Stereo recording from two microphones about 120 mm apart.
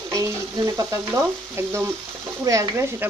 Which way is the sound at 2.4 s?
25° right (ahead or behind).